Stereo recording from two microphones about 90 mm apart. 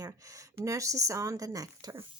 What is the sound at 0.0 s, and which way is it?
Speech, 35° right (ahead or behind).